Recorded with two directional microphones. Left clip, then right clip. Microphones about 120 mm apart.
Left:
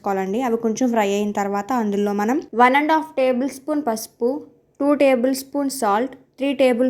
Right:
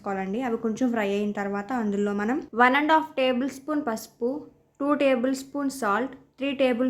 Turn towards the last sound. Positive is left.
turn(degrees=35)  # may be behind; listen again after turning